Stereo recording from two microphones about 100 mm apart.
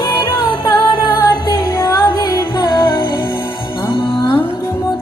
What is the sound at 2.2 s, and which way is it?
Music, 45° left (ahead or behind).